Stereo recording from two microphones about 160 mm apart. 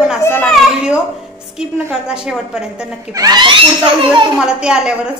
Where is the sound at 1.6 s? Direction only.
5° right (ahead or behind).